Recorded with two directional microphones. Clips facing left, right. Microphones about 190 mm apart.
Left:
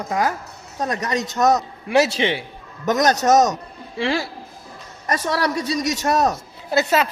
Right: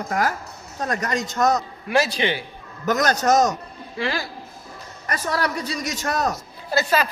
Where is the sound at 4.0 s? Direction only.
25° left (ahead or behind).